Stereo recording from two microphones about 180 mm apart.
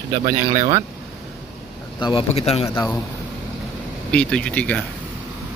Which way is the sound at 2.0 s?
30° left (ahead or behind).